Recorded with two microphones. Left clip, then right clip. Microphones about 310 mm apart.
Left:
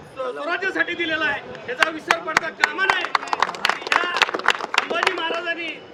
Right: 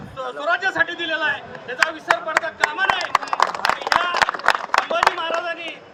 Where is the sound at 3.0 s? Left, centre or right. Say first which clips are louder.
Right 2 dB; centre.